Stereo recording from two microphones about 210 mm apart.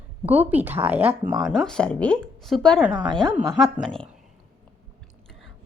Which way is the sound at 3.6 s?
Centre (ahead or behind).